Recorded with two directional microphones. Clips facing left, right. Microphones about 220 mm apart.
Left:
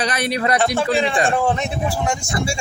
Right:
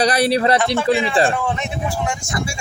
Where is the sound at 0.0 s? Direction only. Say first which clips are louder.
Right 5 dB; 35° right (ahead or behind).